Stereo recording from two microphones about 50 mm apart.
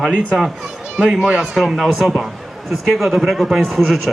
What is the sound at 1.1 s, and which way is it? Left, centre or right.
Speech, centre.